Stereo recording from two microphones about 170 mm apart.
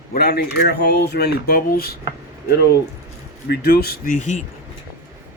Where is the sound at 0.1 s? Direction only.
70° left (ahead or behind).